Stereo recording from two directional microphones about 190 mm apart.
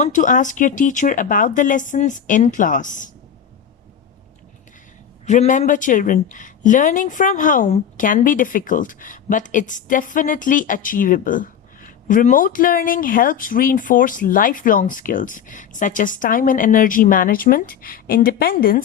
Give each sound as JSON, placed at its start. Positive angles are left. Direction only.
{"t": 0.0, "sound": "a woman's voice", "side_deg": 40}
{"t": 5.2, "sound": "a woman's voice", "side_deg": 40}